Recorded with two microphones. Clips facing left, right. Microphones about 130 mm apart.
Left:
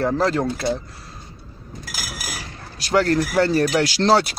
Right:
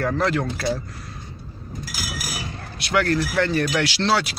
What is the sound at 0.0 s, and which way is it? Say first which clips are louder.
Speech: left 2 dB; 30° left (ahead or behind).